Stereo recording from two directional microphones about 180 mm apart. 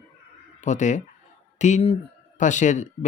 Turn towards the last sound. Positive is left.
turn(degrees=45)  # may be behind; listen again after turning